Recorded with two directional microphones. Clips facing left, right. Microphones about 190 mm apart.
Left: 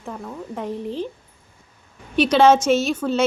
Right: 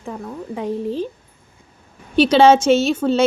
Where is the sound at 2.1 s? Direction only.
30° right (ahead or behind).